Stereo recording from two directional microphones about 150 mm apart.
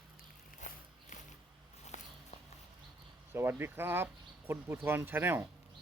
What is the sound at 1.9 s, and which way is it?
Walk, 50° left (ahead or behind).